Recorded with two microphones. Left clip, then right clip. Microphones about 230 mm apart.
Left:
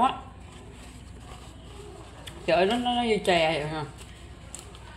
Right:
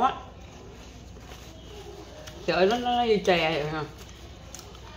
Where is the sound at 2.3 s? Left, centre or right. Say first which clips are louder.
Even; centre.